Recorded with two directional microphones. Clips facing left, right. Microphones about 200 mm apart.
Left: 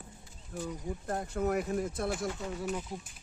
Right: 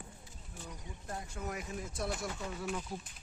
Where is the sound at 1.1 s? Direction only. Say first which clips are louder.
Left 10 dB; 60° left (ahead or behind).